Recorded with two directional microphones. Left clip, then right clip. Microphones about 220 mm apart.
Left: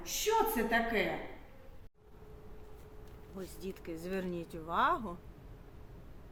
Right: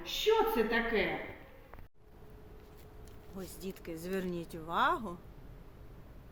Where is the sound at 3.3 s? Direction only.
5° right (ahead or behind).